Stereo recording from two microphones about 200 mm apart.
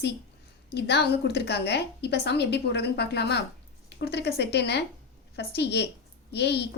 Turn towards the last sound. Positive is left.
turn(degrees=55)  # may be behind; listen again after turning